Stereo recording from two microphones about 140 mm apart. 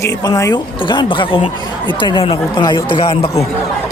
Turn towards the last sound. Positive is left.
turn(degrees=40)  # may be behind; listen again after turning